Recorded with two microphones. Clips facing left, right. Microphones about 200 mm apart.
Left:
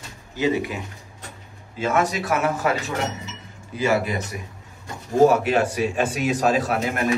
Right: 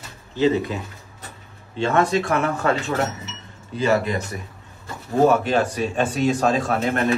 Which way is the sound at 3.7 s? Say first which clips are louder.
Right 1 dB; 5° left (ahead or behind).